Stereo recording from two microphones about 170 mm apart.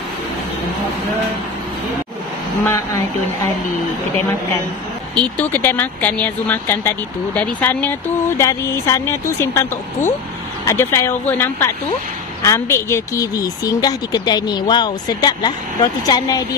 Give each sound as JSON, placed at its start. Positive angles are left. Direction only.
{"t": 2.6, "sound": "speech", "side_deg": 15}
{"t": 5.1, "sound": "speech", "side_deg": 10}